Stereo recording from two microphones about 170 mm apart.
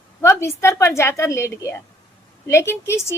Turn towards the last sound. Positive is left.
turn(degrees=15)  # may be behind; listen again after turning